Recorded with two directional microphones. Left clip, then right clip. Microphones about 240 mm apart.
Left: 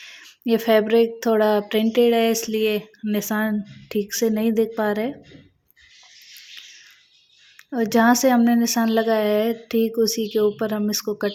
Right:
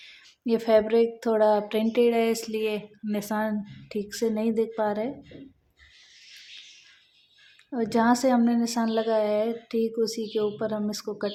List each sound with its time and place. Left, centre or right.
0.0 s speech: left
7.7 s speech: left